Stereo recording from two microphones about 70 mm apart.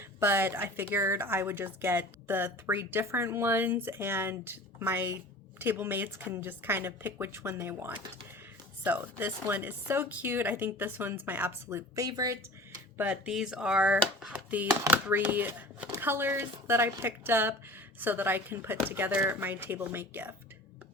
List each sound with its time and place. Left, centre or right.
0.0 s a woman's voice: right
11.9 s speech: right
13.2 s a woman's voice: centre; by 20.3 s right